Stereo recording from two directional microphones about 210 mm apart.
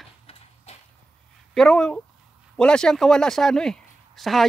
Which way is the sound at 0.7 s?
30° left (ahead or behind).